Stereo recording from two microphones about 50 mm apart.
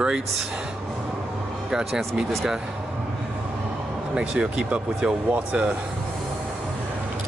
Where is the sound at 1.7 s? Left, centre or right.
Centre.